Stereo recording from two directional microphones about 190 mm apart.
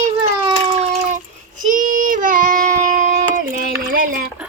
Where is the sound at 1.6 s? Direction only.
45° right (ahead or behind).